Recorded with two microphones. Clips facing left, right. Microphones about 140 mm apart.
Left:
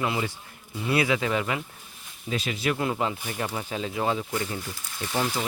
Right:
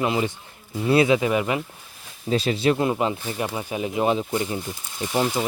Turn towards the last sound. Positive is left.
turn(degrees=-20)  # may be behind; listen again after turning